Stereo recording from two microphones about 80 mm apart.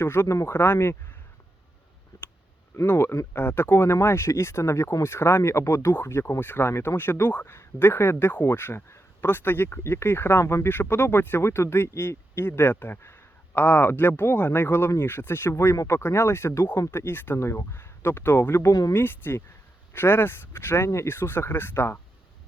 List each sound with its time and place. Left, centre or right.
0.0 s speech: left
2.8 s speech: left
18.7 s speech: left
18.9 s speech: left